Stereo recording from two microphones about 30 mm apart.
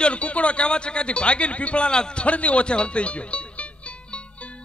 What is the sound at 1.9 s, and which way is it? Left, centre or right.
Speech, left.